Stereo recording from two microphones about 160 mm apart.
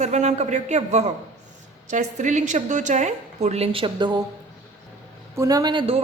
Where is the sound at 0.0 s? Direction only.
45° right (ahead or behind); by 4.2 s 30° right (ahead or behind).